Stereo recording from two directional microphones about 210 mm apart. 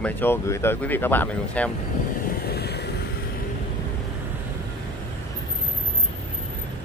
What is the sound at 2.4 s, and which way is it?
Vehicle, 50° left (ahead or behind).